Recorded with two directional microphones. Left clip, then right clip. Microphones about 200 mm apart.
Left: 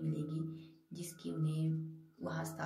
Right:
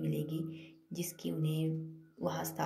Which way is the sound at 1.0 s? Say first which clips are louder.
Right 4 dB; 10° right (ahead or behind).